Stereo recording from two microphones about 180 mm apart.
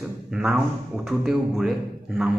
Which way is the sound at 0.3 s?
5° right (ahead or behind).